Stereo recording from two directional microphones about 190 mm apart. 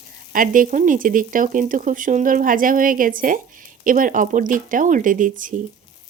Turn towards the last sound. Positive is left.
turn(degrees=-45)  # may be behind; listen again after turning